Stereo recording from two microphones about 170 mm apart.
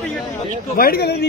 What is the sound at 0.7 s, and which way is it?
Speech, 60° left (ahead or behind).